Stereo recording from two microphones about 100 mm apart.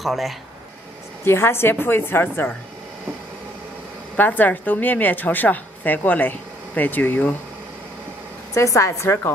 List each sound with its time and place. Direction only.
0.0 s speech: centre (ahead or behind)
1.2 s a woman's voice: 25° left (ahead or behind)
4.2 s a woman's voice: 20° left (ahead or behind)
8.5 s a woman's voice: 30° left (ahead or behind)